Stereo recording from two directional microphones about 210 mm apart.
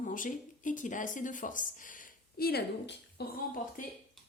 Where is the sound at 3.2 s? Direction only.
50° left (ahead or behind).